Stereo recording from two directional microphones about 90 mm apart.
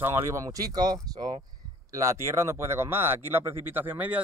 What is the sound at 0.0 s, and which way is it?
Speech, 35° right (ahead or behind).